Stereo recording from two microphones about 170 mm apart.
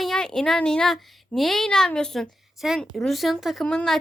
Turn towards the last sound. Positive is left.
turn(degrees=5)  # may be behind; listen again after turning